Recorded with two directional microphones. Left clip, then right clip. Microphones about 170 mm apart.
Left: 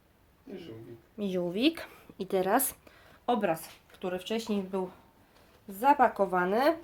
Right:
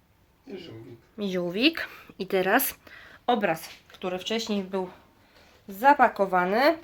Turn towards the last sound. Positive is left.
turn(degrees=0)  # may be behind; listen again after turning